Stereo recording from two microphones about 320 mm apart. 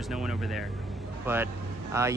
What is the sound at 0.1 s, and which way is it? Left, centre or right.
Speech, centre.